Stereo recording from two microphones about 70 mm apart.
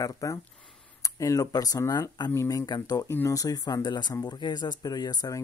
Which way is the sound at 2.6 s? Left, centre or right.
Left.